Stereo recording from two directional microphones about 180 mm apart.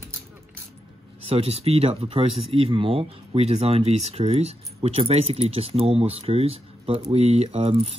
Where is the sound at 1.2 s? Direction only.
30° right (ahead or behind).